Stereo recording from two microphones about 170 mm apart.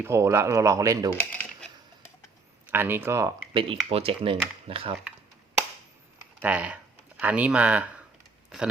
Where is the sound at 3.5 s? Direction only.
30° right (ahead or behind).